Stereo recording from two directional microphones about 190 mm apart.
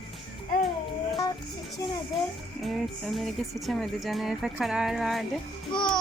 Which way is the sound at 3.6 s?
Centre (ahead or behind).